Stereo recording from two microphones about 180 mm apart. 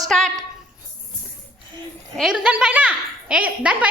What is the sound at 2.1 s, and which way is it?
A woman's voice, 5° right (ahead or behind).